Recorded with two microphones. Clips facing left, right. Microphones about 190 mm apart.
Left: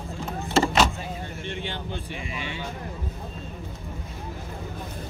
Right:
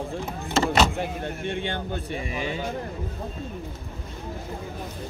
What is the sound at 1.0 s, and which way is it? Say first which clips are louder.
Speech: right 5 dB; 60° right (ahead or behind).